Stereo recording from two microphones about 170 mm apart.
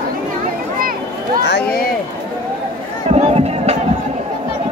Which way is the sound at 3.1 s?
40° right (ahead or behind).